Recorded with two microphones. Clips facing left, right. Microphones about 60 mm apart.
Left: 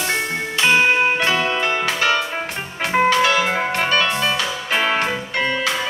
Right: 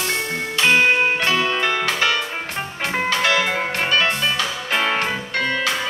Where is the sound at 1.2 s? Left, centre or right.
Left.